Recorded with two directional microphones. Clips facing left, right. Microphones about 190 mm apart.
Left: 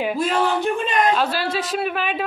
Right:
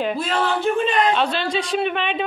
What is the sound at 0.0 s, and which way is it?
A woman's voice, 10° left (ahead or behind).